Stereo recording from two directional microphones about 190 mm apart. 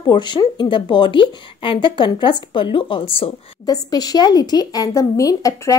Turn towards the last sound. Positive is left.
turn(degrees=20)  # may be behind; listen again after turning